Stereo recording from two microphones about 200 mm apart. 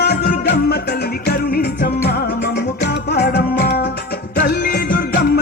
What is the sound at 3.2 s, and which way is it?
Music, 55° left (ahead or behind).